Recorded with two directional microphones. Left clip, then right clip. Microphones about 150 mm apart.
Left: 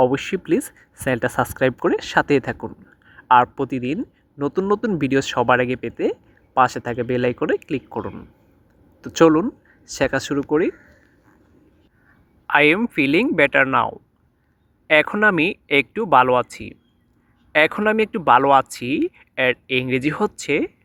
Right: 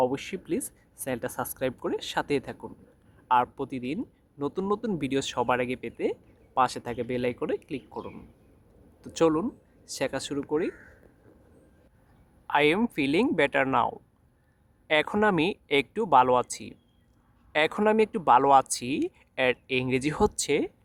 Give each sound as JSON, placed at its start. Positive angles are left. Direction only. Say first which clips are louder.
{"t": 0.0, "sound": "speech", "louder": "left 9 dB", "side_deg": 35}
{"t": 12.5, "sound": "speech", "louder": "left 8 dB", "side_deg": 15}